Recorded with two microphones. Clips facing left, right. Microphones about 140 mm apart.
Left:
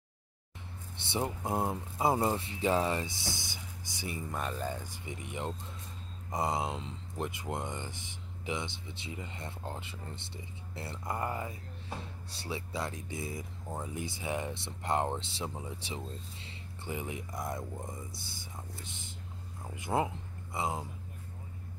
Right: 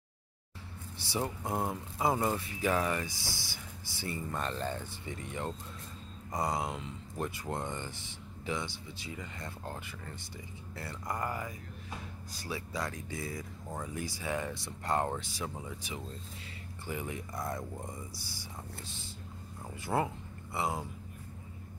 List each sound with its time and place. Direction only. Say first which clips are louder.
1.0 s speech: left 1 dB; 25° left (ahead or behind)